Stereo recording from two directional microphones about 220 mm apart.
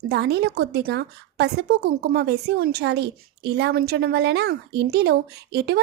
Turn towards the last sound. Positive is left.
turn(degrees=-45)  # may be behind; listen again after turning